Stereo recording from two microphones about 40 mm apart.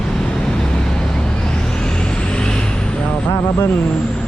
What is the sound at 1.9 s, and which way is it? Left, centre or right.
Vehicle, left.